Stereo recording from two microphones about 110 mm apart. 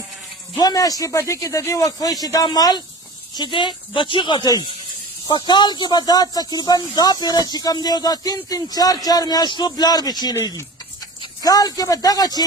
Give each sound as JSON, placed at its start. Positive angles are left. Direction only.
{"t": 0.5, "sound": "speech", "side_deg": 35}
{"t": 11.4, "sound": "speech", "side_deg": 35}